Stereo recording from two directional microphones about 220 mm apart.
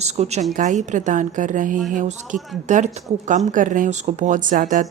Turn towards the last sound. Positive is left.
turn(degrees=-35)  # may be behind; listen again after turning